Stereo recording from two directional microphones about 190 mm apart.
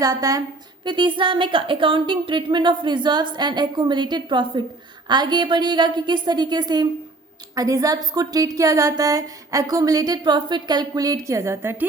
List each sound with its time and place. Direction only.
0.0 s speech: 20° right (ahead or behind)